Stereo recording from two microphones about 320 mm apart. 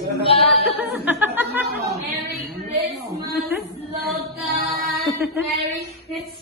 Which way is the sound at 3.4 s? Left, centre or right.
Centre.